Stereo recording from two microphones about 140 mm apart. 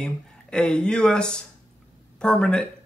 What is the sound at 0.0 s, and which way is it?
Speech, 5° left (ahead or behind).